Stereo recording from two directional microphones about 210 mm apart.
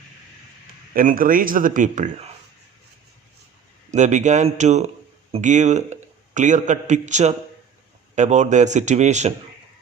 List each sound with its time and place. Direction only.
0.9 s speech: 40° right (ahead or behind)
3.9 s a man's voice: 35° right (ahead or behind)